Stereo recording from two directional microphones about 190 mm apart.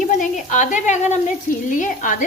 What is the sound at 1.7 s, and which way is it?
Stir, 45° left (ahead or behind).